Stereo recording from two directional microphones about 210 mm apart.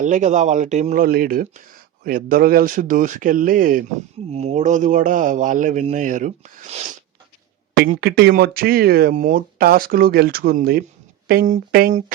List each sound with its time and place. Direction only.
0.0 s a man's voice: 35° right (ahead or behind)
4.3 s a man's voice: 30° right (ahead or behind)
7.7 s speech: 50° right (ahead or behind)